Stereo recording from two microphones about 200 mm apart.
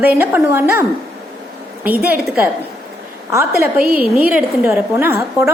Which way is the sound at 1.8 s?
10° right (ahead or behind).